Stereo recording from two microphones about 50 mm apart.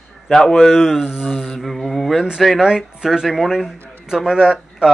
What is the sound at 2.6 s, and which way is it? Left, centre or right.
Speech, centre.